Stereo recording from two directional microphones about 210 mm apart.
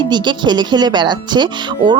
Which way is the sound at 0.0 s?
20° right (ahead or behind).